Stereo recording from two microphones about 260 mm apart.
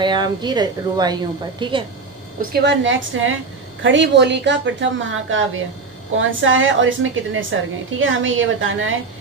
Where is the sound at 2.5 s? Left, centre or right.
Right.